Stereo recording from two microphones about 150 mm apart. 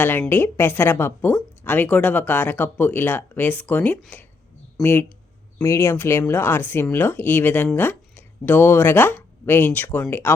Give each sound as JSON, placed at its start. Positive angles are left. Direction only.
{"t": 0.0, "sound": "a woman's voice", "side_deg": 15}